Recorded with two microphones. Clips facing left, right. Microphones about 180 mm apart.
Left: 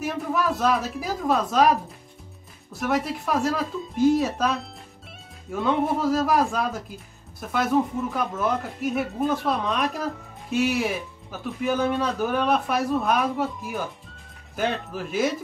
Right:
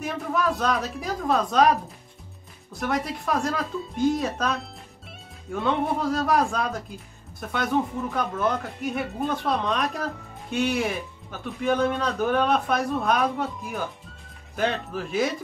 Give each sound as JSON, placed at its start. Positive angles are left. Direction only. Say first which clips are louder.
{"t": 0.0, "sound": "speech", "louder": "left 1 dB", "side_deg": 5}
{"t": 2.7, "sound": "speech", "louder": "left 2 dB", "side_deg": 5}